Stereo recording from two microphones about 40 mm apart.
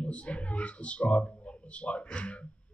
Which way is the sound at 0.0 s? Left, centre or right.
Left.